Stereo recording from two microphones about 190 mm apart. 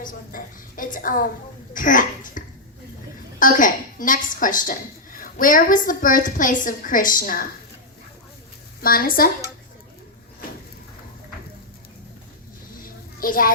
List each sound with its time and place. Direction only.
0.0 s a woman's voice: 45° left (ahead or behind)
8.8 s a woman's voice: 50° left (ahead or behind)
12.8 s a sound: 50° left (ahead or behind)